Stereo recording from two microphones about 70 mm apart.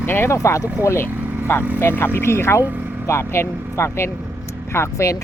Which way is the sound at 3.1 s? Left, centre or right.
Left.